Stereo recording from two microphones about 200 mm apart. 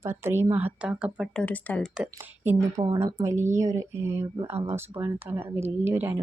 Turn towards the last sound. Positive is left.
turn(degrees=-10)  # may be behind; listen again after turning